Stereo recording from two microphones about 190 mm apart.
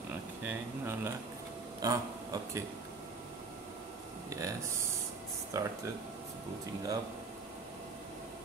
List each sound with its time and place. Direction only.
0.5 s speech: 15° right (ahead or behind)
4.3 s speech: 15° right (ahead or behind)